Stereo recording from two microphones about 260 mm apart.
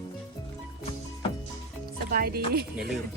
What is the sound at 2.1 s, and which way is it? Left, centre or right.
Speech, right.